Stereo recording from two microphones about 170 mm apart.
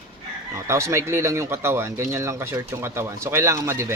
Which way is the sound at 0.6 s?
15° right (ahead or behind).